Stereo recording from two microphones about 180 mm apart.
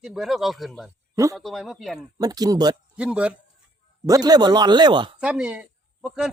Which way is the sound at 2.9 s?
5° right (ahead or behind).